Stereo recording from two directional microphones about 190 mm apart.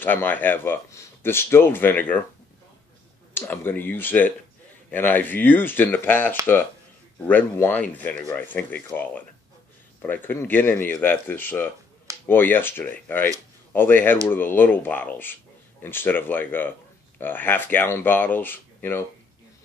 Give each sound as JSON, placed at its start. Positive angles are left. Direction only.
{"t": 0.0, "sound": "speech", "side_deg": 10}
{"t": 3.3, "sound": "speech", "side_deg": 10}